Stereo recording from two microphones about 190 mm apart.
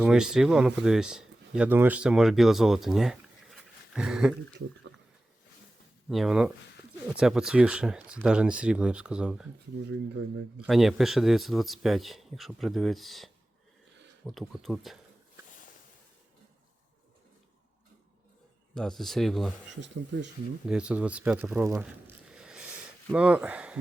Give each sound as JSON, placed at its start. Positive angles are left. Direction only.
{"t": 0.0, "sound": "speech", "side_deg": -5}
{"t": 6.1, "sound": "speech", "side_deg": 0}
{"t": 10.6, "sound": "speech", "side_deg": 0}
{"t": 18.7, "sound": "speech", "side_deg": 0}
{"t": 19.8, "sound": "speech", "side_deg": -70}
{"t": 20.7, "sound": "speech", "side_deg": -5}